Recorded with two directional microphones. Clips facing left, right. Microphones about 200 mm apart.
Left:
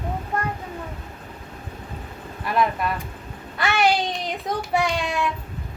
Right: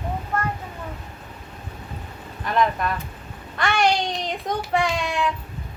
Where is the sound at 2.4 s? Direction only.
5° left (ahead or behind).